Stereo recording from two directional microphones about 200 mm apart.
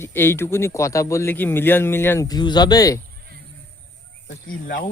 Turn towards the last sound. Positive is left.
turn(degrees=45)  # may be behind; listen again after turning